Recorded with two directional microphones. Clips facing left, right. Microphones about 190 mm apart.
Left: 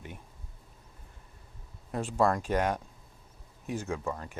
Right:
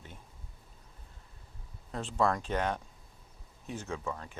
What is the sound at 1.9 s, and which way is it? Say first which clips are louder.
Speech: left 3 dB; 10° left (ahead or behind).